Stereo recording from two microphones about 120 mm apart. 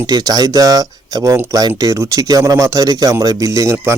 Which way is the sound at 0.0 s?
35° right (ahead or behind).